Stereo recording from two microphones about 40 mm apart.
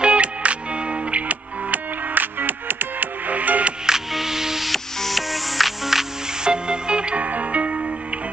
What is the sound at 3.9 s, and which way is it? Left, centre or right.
Music, centre.